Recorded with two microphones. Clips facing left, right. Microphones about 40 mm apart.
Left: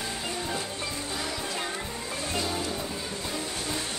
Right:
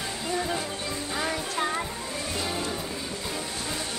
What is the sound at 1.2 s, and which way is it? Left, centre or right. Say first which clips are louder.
Music: right 3 dB; right.